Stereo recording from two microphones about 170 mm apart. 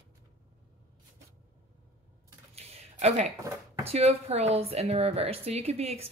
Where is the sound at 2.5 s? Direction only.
40° right (ahead or behind).